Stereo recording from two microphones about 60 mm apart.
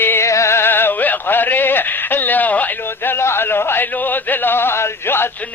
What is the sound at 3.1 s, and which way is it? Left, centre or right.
Speech, left.